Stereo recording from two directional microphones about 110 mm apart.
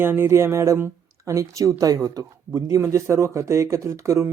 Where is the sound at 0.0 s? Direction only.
20° right (ahead or behind).